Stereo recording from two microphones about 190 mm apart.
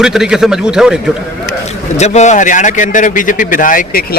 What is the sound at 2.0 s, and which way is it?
A man's voice, 35° left (ahead or behind).